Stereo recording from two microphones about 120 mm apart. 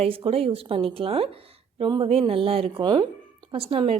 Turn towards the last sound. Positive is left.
turn(degrees=-55)  # may be behind; listen again after turning